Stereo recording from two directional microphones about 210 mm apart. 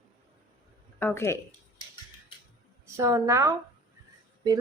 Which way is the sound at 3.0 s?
15° right (ahead or behind).